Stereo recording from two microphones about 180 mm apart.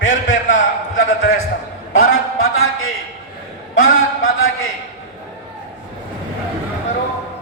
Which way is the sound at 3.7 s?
90° left.